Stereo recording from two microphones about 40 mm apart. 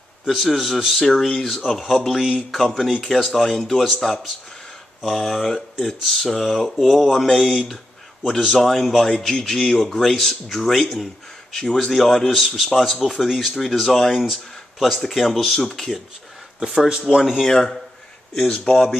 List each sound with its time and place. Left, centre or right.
0.3 s speech: centre
16.6 s speech: right
17.2 s speech: centre
17.5 s speech: centre